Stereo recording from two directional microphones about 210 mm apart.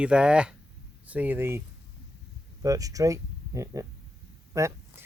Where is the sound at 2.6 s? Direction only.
15° right (ahead or behind).